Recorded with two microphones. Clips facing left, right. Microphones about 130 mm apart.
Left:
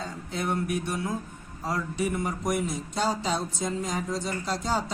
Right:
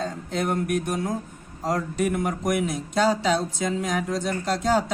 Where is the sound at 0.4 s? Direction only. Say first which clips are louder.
Right 3 dB; 50° right (ahead or behind).